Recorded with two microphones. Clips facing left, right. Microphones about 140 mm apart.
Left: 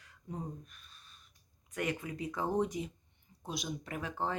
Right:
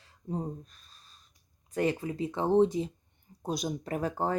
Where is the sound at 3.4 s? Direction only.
40° right (ahead or behind).